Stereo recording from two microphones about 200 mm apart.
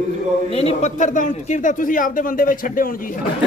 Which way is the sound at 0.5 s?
30° left (ahead or behind).